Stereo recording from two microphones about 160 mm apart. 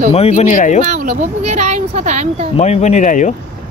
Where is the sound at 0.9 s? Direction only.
50° right (ahead or behind).